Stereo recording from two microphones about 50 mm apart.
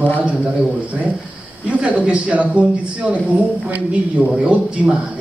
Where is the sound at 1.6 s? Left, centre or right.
Right.